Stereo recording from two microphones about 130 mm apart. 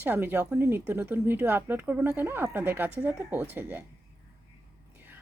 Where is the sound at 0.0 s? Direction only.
15° right (ahead or behind).